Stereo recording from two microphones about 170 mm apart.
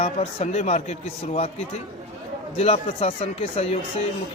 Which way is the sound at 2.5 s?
35° left (ahead or behind).